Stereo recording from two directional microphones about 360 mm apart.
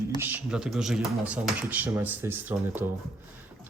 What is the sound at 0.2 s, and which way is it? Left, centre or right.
Speech, centre.